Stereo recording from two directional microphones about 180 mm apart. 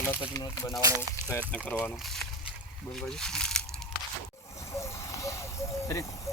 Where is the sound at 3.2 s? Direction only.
5° left (ahead or behind).